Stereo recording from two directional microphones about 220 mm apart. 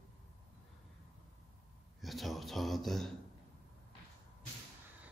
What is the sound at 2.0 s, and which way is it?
A man's voice, centre (ahead or behind).